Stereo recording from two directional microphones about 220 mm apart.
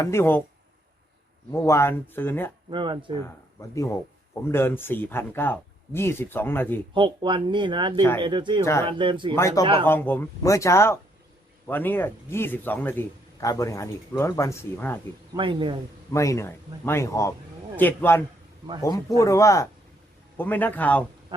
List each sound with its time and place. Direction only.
0.0 s a man's voice: 10° left (ahead or behind)
1.5 s a man's voice: 10° left (ahead or behind)
2.6 s speech: 20° right (ahead or behind)
3.2 s a man's voice: 15° left (ahead or behind)
6.9 s speech: 20° right (ahead or behind)
8.6 s a man's voice: 10° left (ahead or behind)
8.9 s speech: 20° right (ahead or behind)
9.3 s a man's voice: 15° left (ahead or behind)
15.4 s speech: 20° right (ahead or behind)
16.1 s a man's voice: 15° left (ahead or behind)